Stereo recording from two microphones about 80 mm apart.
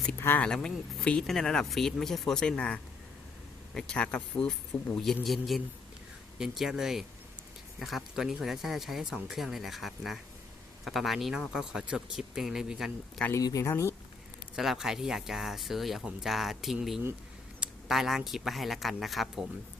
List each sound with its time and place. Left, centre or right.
0.3 s speech: centre
13.4 s speech: left
14.5 s speech: centre
17.6 s a sound: centre
18.3 s speech: centre